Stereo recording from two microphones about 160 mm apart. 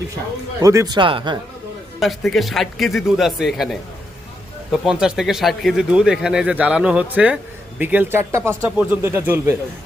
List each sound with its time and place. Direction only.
0.6 s speech: 20° right (ahead or behind)
2.0 s speech: centre (ahead or behind)